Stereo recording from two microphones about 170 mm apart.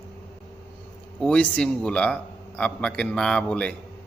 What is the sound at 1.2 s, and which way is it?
A man's voice, 5° left (ahead or behind).